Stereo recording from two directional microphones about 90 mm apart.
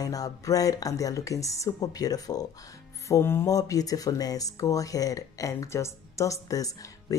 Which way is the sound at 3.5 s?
40° left (ahead or behind).